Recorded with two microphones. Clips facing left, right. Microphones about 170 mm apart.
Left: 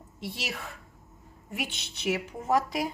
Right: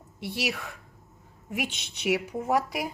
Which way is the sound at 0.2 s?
10° right (ahead or behind).